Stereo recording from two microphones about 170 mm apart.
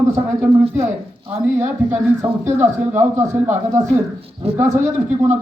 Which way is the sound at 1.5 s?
10° right (ahead or behind).